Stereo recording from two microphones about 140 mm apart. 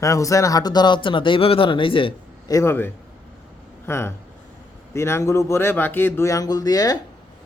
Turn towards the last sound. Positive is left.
turn(degrees=25)  # may be behind; listen again after turning